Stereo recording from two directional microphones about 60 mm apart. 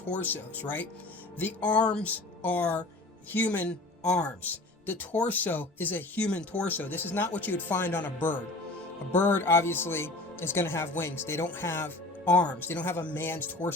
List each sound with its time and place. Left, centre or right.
0.1 s speech: left